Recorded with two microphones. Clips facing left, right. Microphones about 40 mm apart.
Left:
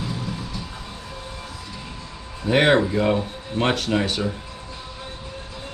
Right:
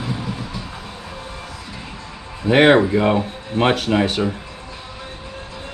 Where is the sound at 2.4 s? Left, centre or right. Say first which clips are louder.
Right 5 dB; right.